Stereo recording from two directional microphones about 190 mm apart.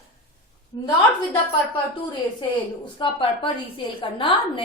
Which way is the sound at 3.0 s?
25° left (ahead or behind).